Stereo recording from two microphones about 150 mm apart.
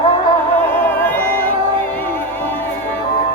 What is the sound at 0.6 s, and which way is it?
Music, 15° left (ahead or behind).